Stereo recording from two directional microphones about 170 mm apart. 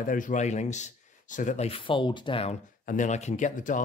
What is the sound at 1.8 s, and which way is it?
Speech, 30° left (ahead or behind).